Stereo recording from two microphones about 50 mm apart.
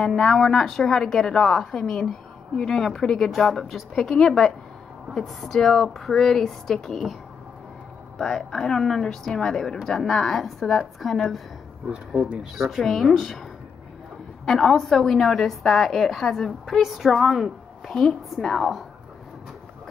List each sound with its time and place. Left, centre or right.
0.0 s a woman's voice: centre
8.2 s a woman's voice: centre
12.5 s a woman's voice: centre
14.4 s a woman's voice: centre
17.8 s a woman's voice: centre